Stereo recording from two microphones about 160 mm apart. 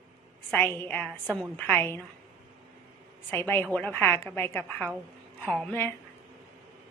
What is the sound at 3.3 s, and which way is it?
A woman's voice, 15° left (ahead or behind).